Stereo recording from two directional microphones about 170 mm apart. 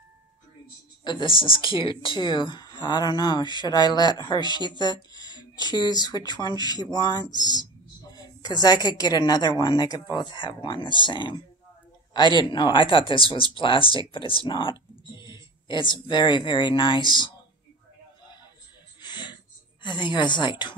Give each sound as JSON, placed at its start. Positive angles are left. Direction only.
{"t": 1.0, "sound": "speech", "side_deg": 30}
{"t": 18.9, "sound": "a sound", "side_deg": 25}
{"t": 19.8, "sound": "speech", "side_deg": 25}